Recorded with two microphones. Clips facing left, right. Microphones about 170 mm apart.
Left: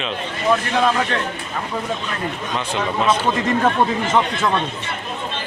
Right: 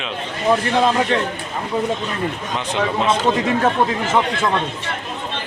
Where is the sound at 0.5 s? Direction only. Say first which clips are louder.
Right 2 dB; 25° right (ahead or behind).